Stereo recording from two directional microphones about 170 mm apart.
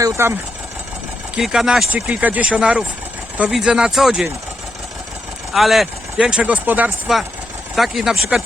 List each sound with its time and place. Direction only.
0.0 s speech: 15° right (ahead or behind)
1.4 s speech: 5° right (ahead or behind)
5.5 s speech: centre (ahead or behind)